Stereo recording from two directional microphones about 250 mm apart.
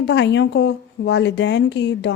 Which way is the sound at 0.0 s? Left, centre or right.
Left.